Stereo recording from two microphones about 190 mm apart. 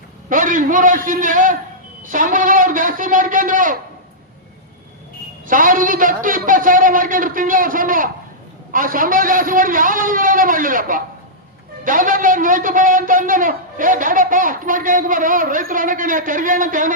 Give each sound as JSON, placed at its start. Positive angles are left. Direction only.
{"t": 0.3, "sound": "a man's voice", "side_deg": -45}
{"t": 5.5, "sound": "a man's voice", "side_deg": -45}